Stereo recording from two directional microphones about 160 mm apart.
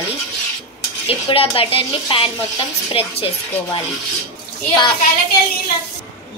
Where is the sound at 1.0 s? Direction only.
35° left (ahead or behind).